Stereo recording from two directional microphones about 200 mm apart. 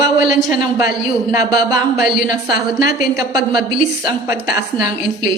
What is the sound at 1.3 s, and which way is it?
Speech, 20° right (ahead or behind).